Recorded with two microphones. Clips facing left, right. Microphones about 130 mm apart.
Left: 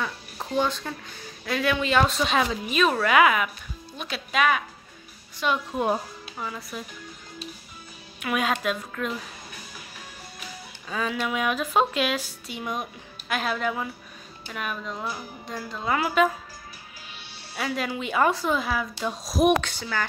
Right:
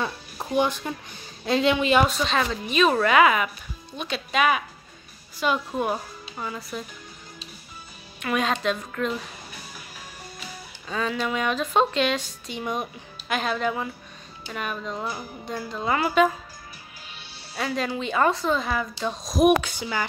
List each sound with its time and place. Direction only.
0.4 s speech: 15° right (ahead or behind)
2.2 s speech: 5° left (ahead or behind)
5.8 s speech: 15° left (ahead or behind)
6.3 s speech: centre (ahead or behind)
8.2 s speech: 5° left (ahead or behind)
10.9 s speech: 5° left (ahead or behind)
17.6 s speech: 5° left (ahead or behind)
19.6 s speech: 10° right (ahead or behind)